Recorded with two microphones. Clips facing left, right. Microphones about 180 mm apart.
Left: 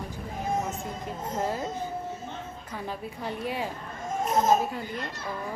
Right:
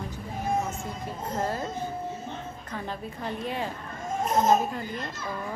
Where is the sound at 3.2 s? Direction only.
10° left (ahead or behind).